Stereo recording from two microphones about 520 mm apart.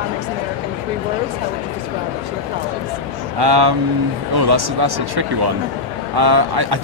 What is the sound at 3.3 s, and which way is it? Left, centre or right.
Speech, right.